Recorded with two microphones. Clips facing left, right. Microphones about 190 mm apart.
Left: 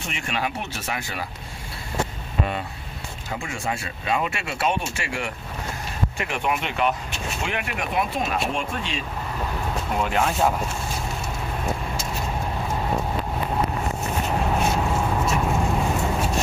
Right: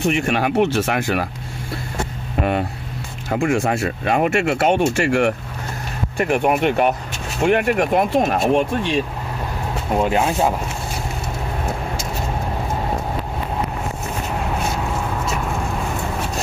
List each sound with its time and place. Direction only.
0.3 s speech: 55° right (ahead or behind)
3.3 s speech: 50° right (ahead or behind)
9.9 s speech: 25° right (ahead or behind)